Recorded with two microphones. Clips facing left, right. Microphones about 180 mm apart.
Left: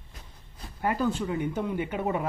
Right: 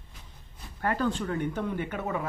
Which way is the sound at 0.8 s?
10° left (ahead or behind).